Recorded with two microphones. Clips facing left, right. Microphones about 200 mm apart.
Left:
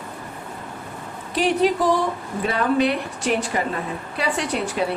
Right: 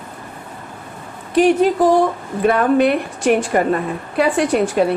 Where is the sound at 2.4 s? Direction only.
50° right (ahead or behind).